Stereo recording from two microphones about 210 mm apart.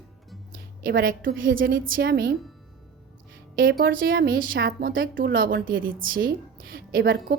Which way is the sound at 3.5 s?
45° right (ahead or behind).